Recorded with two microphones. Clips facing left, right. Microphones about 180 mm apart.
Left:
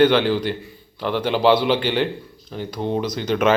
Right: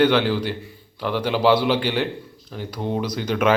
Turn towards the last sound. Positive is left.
turn(degrees=-10)  # may be behind; listen again after turning